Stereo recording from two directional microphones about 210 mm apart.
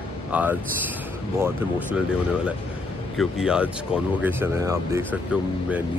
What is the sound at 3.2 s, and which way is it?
Speech, 5° right (ahead or behind).